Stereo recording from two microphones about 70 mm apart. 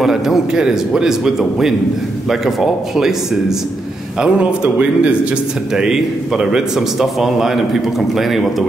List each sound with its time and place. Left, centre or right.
0.0 s a man's voice: centre
4.2 s a man's voice: centre